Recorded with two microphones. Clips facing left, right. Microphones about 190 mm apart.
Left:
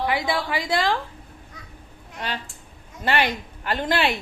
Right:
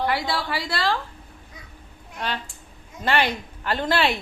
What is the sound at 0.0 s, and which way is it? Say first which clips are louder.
Speech: left 1 dB; 15° left (ahead or behind).